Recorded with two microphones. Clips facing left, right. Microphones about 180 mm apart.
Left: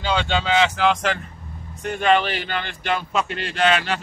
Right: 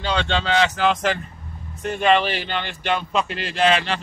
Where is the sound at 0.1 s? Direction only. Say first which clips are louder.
Left 1 dB; 5° left (ahead or behind).